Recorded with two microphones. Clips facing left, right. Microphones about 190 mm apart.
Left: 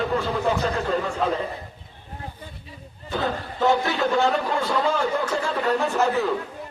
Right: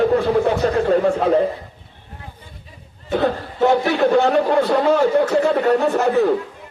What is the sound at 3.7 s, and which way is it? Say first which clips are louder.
A man's voice: right 6 dB; 60° right (ahead or behind).